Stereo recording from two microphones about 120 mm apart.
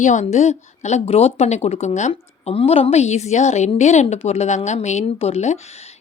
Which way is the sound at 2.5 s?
55° left (ahead or behind).